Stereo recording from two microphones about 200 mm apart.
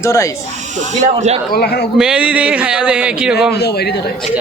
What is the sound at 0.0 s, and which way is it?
Speech, 15° left (ahead or behind).